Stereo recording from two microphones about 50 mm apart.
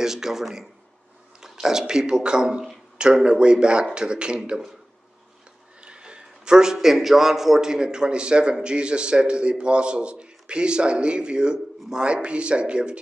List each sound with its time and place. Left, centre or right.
0.0 s a man's voice: centre
5.9 s a man's voice: right